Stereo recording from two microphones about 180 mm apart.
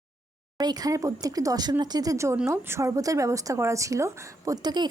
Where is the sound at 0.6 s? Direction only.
20° right (ahead or behind).